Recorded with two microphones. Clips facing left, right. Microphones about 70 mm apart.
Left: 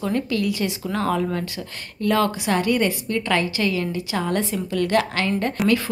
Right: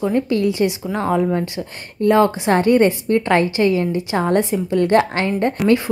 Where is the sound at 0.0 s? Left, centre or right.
Right.